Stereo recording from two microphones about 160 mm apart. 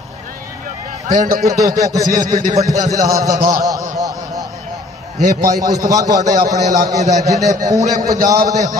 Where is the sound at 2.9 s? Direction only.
20° right (ahead or behind).